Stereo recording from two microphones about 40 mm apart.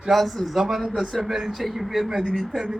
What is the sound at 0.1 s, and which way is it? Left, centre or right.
A man's voice, centre.